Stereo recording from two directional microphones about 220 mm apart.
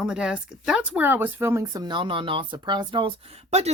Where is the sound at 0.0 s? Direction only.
5° right (ahead or behind).